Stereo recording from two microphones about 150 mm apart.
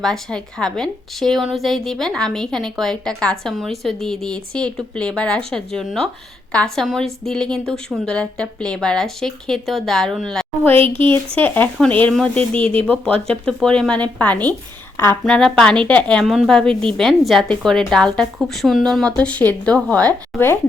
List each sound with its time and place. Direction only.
0.0 s a woman's voice: 5° left (ahead or behind)
10.8 s speech: 35° right (ahead or behind)
11.3 s speech: 10° left (ahead or behind)
12.5 s speech: 35° right (ahead or behind)
13.2 s a woman's voice: 5° left (ahead or behind)
15.2 s a woman's voice: centre (ahead or behind)